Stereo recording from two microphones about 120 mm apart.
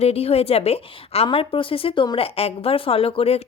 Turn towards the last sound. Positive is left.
turn(degrees=55)  # may be behind; listen again after turning